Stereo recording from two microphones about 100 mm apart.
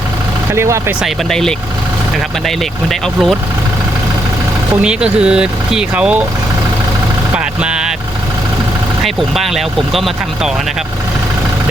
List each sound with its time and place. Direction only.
0.5 s speech: 25° right (ahead or behind)
1.0 s speech: 5° left (ahead or behind)
2.9 s speech: centre (ahead or behind)
4.8 s speech: 10° right (ahead or behind)
7.3 s vehicle: 10° right (ahead or behind)
9.0 s speech: centre (ahead or behind)